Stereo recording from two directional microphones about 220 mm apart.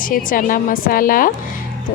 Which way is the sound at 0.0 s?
40° left (ahead or behind).